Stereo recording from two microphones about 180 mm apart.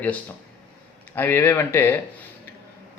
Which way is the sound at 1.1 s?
10° left (ahead or behind).